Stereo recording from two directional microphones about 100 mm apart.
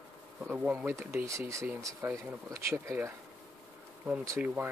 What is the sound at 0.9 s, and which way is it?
Speech, 25° right (ahead or behind).